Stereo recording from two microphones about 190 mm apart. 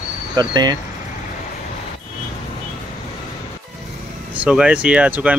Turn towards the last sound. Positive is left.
turn(degrees=-10)  # may be behind; listen again after turning